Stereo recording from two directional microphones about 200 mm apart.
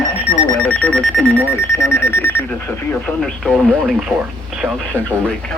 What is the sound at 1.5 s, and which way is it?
Speech, 10° left (ahead or behind).